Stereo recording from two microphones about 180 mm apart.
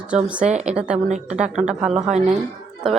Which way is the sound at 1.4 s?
40° right (ahead or behind).